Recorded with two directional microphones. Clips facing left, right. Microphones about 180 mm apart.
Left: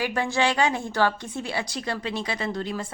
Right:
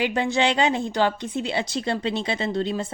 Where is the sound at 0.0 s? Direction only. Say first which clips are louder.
Right 2 dB; 20° right (ahead or behind).